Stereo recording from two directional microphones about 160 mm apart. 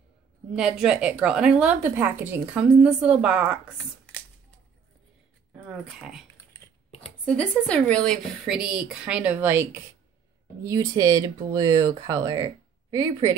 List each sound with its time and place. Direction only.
0.5 s a woman's voice: 5° right (ahead or behind)
5.5 s speech: 10° right (ahead or behind)
7.2 s a woman's voice: 5° left (ahead or behind); by 13.4 s 20° right (ahead or behind)